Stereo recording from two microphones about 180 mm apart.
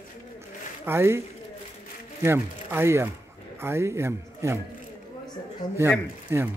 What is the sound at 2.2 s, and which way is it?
A man's voice, 15° right (ahead or behind).